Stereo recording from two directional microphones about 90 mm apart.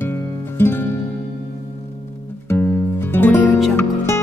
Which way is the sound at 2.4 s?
20° left (ahead or behind).